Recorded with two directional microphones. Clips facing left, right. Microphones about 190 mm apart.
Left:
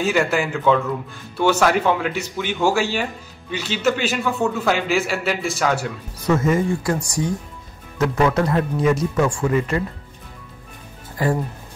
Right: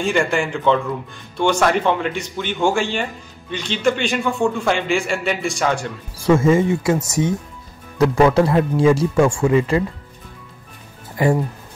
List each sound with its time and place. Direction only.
0.0 s speech: 5° left (ahead or behind)
6.2 s speech: 25° right (ahead or behind)